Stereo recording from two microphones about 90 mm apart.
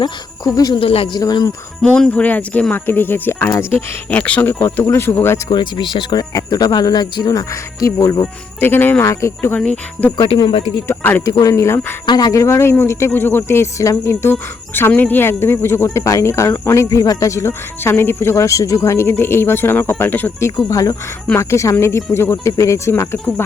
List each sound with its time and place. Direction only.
0.0 s speech: 45° left (ahead or behind)
0.8 s speech: 90° left
1.1 s speech: 50° left (ahead or behind)
1.8 s speech: 10° left (ahead or behind)
5.5 s speech: 60° left (ahead or behind); by 8.1 s 35° left (ahead or behind)
8.2 s speech: 25° left (ahead or behind)
9.6 s speech: 10° left (ahead or behind)
10.8 s speech: 20° left (ahead or behind)
11.3 s speech: 40° left (ahead or behind)
12.0 s speech: 50° left (ahead or behind); by 20.5 s 20° left (ahead or behind)
20.6 s speech: 40° left (ahead or behind)